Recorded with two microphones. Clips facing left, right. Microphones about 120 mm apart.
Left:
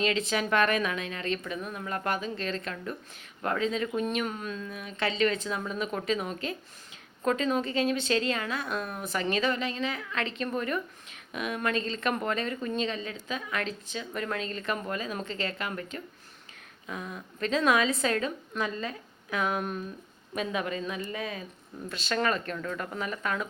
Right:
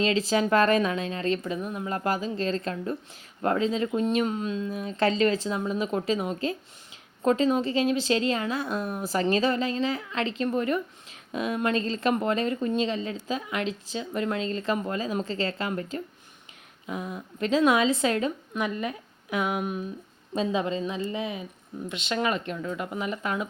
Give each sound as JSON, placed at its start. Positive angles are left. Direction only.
{"t": 0.0, "sound": "speech", "side_deg": -30}
{"t": 4.9, "sound": "speech", "side_deg": -35}
{"t": 20.3, "sound": "speech", "side_deg": -25}